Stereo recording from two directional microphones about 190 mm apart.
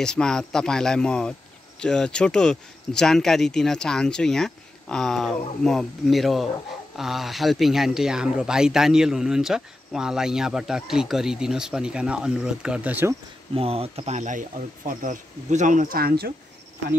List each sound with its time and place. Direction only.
0.0 s speech: 5° left (ahead or behind)
13.6 s speech: 30° right (ahead or behind); by 16.3 s 55° right (ahead or behind)